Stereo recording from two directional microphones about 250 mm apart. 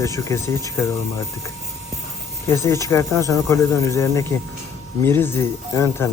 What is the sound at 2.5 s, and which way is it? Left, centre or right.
Speech, centre.